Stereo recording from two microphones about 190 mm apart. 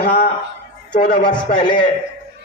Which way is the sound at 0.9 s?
40° left (ahead or behind).